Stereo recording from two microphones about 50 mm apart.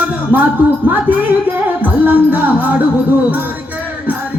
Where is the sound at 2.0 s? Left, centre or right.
Right.